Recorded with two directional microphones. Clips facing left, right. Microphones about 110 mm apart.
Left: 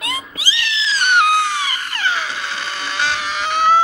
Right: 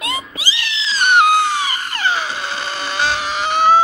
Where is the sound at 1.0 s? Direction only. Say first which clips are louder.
Right 3 dB; 40° right (ahead or behind).